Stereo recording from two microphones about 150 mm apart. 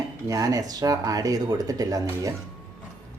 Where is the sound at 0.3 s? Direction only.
20° right (ahead or behind).